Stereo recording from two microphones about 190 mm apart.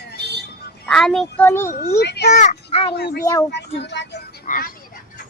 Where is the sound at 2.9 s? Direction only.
55° left (ahead or behind).